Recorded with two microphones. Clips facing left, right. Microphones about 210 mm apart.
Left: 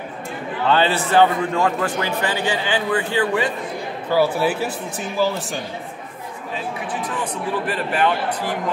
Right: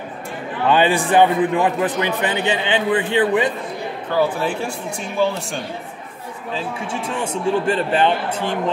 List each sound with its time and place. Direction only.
0.7 s a man's voice: 15° right (ahead or behind)
4.1 s a man's voice: 5° left (ahead or behind)
6.5 s speech: 25° right (ahead or behind)